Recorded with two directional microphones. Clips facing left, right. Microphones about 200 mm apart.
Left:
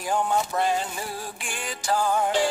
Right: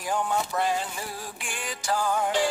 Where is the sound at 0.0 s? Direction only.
30° left (ahead or behind).